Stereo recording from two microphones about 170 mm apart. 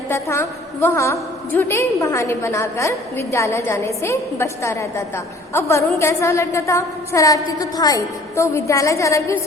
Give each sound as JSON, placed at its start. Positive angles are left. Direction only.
{"t": 0.1, "sound": "a woman's voice", "side_deg": 15}